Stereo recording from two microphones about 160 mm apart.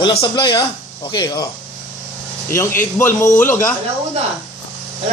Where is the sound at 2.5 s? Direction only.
15° left (ahead or behind).